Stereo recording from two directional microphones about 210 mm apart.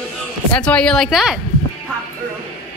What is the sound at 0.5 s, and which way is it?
Speech, 5° left (ahead or behind).